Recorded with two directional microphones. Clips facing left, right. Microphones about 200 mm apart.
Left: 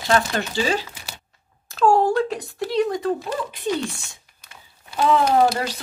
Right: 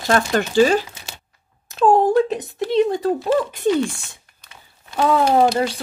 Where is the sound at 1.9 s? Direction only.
20° right (ahead or behind).